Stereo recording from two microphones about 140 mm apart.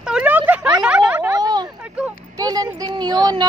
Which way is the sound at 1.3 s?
30° right (ahead or behind).